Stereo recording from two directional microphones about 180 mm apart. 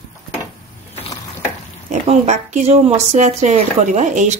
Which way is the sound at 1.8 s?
40° right (ahead or behind).